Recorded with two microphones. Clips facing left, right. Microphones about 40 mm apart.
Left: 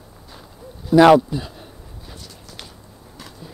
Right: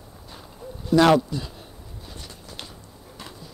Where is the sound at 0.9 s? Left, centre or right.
Centre.